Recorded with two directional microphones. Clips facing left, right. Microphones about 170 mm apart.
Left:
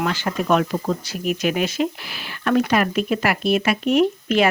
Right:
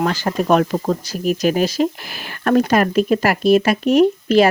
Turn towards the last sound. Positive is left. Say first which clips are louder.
# right 5 dB
turn(degrees=-40)  # may be behind; listen again after turning